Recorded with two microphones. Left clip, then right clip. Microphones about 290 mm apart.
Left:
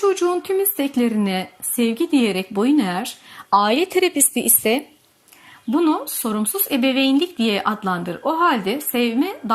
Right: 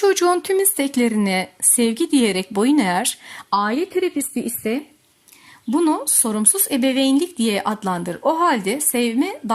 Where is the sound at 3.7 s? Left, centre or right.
Left.